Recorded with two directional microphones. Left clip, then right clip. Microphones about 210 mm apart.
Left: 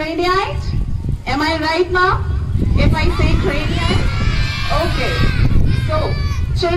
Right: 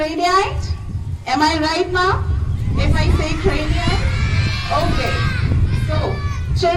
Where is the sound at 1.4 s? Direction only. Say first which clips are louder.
Left 1 dB; 15° left (ahead or behind).